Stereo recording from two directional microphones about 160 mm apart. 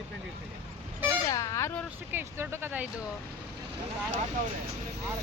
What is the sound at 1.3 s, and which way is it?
Speech, 20° left (ahead or behind).